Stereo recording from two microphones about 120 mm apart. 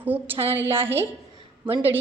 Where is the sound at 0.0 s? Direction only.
15° right (ahead or behind).